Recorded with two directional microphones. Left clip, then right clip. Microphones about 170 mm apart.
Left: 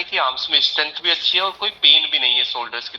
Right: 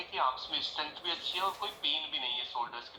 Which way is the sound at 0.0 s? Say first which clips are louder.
Left 12 dB; 35° left (ahead or behind).